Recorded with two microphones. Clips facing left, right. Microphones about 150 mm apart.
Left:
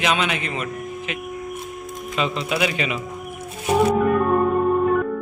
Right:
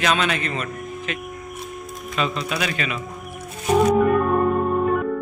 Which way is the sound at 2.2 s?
20° left (ahead or behind).